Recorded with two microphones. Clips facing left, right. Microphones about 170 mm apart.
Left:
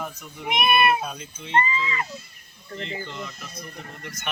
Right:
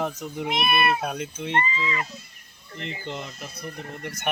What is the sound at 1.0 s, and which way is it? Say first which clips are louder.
Speech: right 5 dB; 70° right (ahead or behind).